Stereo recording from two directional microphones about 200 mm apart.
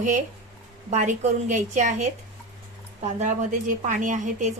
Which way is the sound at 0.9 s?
35° right (ahead or behind).